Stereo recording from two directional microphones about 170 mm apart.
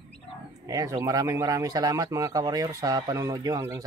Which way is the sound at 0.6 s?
20° right (ahead or behind).